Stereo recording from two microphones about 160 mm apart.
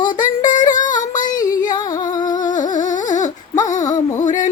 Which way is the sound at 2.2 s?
55° left (ahead or behind).